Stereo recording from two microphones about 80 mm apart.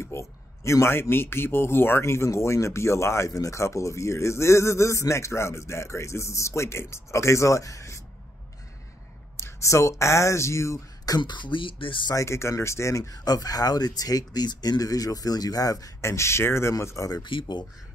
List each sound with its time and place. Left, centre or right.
0.0 s a man's voice: left
9.4 s a man's voice: left
11.1 s speech: left
12.1 s speech: left
17.2 s speech: left